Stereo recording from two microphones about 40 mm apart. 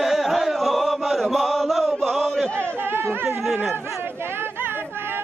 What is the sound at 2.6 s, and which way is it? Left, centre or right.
Chatter, right.